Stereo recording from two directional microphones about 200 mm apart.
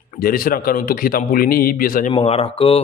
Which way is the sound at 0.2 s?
45° left (ahead or behind).